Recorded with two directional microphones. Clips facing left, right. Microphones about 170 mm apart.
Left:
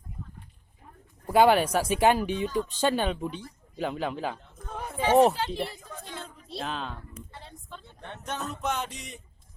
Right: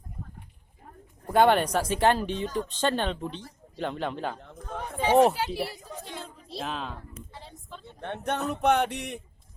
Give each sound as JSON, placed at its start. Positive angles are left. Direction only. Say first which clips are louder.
{"t": 1.3, "sound": "speech", "louder": "left 1 dB", "side_deg": 5}
{"t": 5.2, "sound": "speech", "louder": "even", "side_deg": -10}
{"t": 7.3, "sound": "a sound", "louder": "right 1 dB", "side_deg": 0}
{"t": 8.0, "sound": "speech", "louder": "right 6 dB", "side_deg": -60}